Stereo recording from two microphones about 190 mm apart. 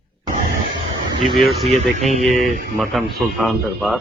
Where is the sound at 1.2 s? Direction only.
Centre (ahead or behind).